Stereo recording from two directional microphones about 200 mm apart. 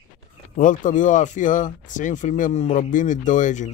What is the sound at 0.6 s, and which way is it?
Speech, 40° left (ahead or behind).